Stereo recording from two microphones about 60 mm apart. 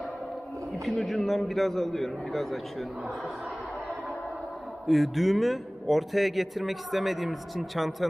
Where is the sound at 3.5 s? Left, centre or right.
Centre.